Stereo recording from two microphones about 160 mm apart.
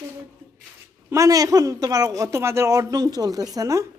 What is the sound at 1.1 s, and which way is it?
Speech, 20° right (ahead or behind).